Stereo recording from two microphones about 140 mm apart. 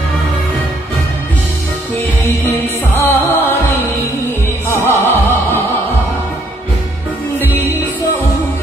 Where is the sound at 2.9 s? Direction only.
15° left (ahead or behind).